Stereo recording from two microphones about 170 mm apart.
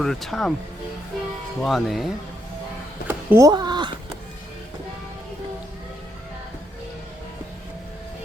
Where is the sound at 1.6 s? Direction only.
Centre (ahead or behind).